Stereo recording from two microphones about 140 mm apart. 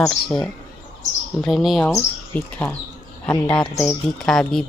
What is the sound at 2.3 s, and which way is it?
Speech, 10° left (ahead or behind).